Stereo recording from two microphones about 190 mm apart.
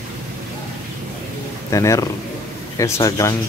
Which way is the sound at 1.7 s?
15° left (ahead or behind).